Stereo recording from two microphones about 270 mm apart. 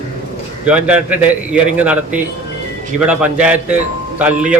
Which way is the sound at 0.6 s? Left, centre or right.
Centre.